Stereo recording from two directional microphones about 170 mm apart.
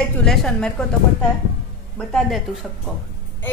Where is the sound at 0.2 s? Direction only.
Centre (ahead or behind).